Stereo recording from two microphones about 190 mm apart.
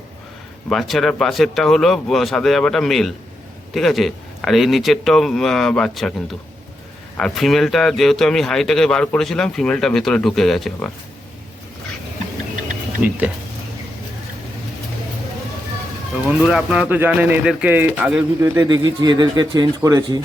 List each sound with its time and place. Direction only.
0.7 s speech: centre (ahead or behind)
13.0 s speech: 10° right (ahead or behind)
16.2 s speech: 5° right (ahead or behind)